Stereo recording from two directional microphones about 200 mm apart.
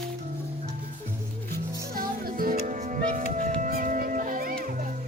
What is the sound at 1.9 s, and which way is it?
Music, 45° right (ahead or behind).